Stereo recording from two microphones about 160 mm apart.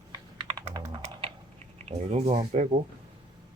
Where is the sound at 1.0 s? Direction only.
35° right (ahead or behind).